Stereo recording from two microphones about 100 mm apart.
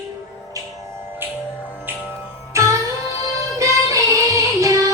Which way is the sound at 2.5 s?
30° right (ahead or behind).